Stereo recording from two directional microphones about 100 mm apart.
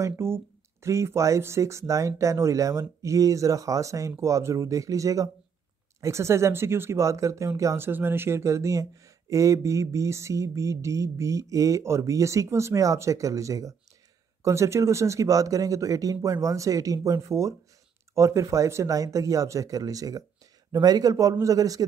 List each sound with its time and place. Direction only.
0.0 s speech: 25° right (ahead or behind)